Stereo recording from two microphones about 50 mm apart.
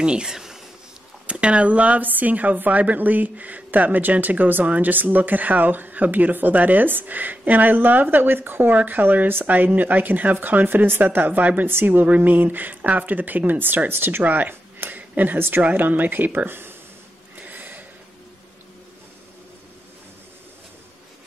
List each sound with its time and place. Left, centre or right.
0.0 s speech: centre
1.2 s speech: right
14.2 s speech: right
14.5 s a sound: right
15.6 s speech: right
17.4 s a sound: right